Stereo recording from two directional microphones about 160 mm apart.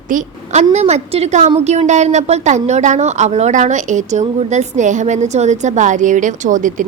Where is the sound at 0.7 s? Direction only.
40° right (ahead or behind).